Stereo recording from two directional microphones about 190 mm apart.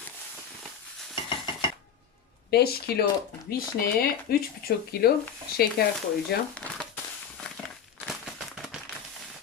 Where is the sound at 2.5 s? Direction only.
55° left (ahead or behind).